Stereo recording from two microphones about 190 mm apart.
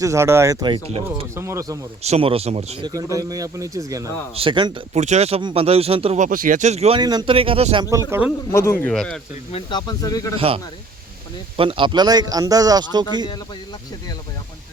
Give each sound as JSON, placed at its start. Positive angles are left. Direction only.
{"t": 0.0, "sound": "speech", "side_deg": -15}
{"t": 1.4, "sound": "speech", "side_deg": -15}
{"t": 2.0, "sound": "speech", "side_deg": -30}
{"t": 2.8, "sound": "a man's voice", "side_deg": -20}
{"t": 4.9, "sound": "speech", "side_deg": -35}
{"t": 7.0, "sound": "a man's voice", "side_deg": -20}
{"t": 8.8, "sound": "speech", "side_deg": 5}
{"t": 9.5, "sound": "speech", "side_deg": 30}
{"t": 10.3, "sound": "a man's voice", "side_deg": -30}